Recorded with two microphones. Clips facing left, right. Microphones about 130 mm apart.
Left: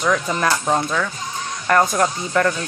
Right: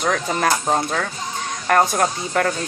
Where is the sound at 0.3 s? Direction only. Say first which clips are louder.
Even; 35° right (ahead or behind).